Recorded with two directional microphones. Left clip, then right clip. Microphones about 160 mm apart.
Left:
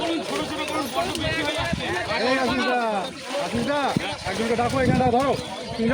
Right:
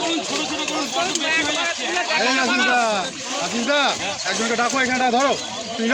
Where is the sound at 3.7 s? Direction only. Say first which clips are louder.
Right 7 dB; 20° right (ahead or behind).